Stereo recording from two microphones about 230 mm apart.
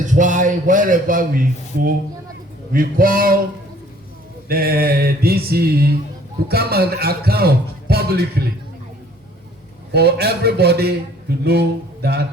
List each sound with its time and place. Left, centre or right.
0.0 s a man's voice: right
4.4 s a man's voice: right
9.9 s a man's voice: right